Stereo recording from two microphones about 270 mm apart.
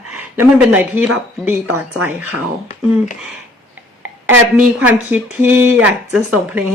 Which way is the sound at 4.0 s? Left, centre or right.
Centre.